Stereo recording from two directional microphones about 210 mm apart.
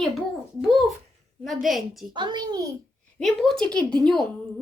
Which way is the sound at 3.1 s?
5° left (ahead or behind).